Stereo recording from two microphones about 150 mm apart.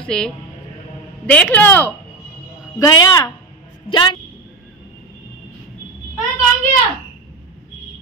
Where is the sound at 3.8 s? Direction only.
30° left (ahead or behind).